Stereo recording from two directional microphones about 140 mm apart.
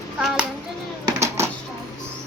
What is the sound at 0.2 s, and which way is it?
Hands, centre (ahead or behind).